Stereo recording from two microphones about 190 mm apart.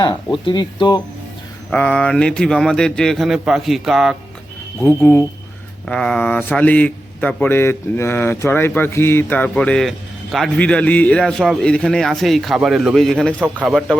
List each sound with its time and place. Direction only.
0.4 s speech: 25° left (ahead or behind)
1.7 s a man's voice: 5° left (ahead or behind)
4.8 s a man's voice: 10° left (ahead or behind)